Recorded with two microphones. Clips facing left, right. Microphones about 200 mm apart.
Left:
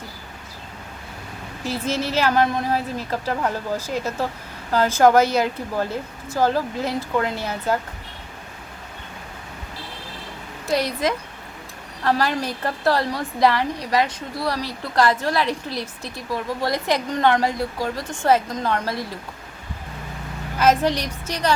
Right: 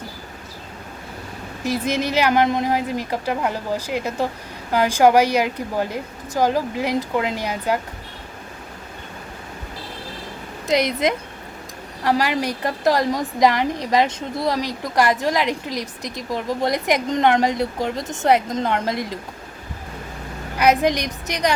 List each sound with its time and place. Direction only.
1.6 s a woman's voice: 15° right (ahead or behind)
10.7 s a woman's voice: 20° right (ahead or behind)
20.6 s a woman's voice: 15° right (ahead or behind)